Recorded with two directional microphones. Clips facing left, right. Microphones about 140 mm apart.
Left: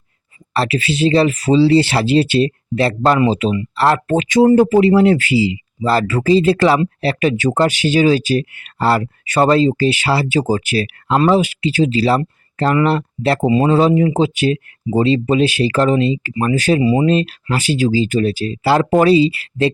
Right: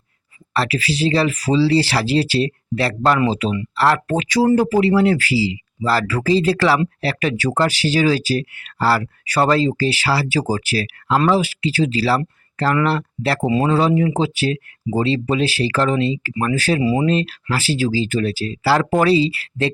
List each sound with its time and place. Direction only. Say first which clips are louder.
0.5 s speech: left 3 dB; 25° left (ahead or behind)
13.4 s speech: left 4 dB; 10° left (ahead or behind)